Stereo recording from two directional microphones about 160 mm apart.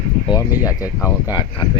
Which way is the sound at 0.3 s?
20° left (ahead or behind).